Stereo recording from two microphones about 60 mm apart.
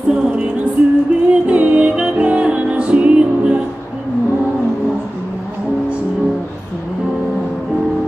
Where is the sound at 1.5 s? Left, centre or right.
Centre.